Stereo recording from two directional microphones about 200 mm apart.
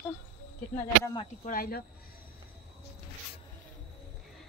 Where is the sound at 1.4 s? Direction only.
45° left (ahead or behind).